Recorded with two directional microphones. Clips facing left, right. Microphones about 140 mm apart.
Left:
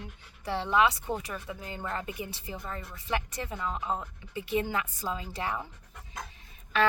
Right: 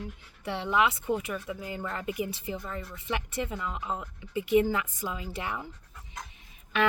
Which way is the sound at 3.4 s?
30° left (ahead or behind).